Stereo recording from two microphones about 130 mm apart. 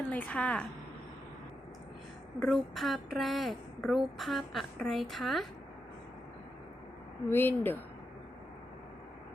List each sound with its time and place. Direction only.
0.1 s speech: 10° left (ahead or behind)
2.4 s a woman's voice: centre (ahead or behind)
7.3 s speech: 15° left (ahead or behind)